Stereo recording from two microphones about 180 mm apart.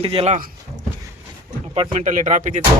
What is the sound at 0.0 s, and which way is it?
Speech, 30° right (ahead or behind).